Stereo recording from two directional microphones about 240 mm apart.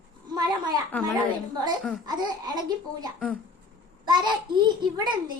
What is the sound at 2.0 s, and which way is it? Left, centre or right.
A child's voice, centre.